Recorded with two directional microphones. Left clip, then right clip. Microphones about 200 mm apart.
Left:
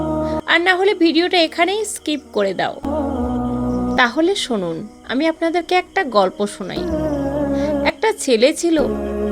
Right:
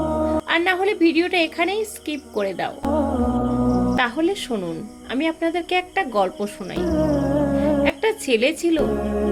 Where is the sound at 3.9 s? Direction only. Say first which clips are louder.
Left 5 dB; 35° left (ahead or behind).